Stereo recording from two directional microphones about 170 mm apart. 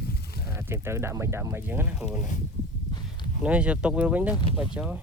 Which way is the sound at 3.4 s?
5° right (ahead or behind).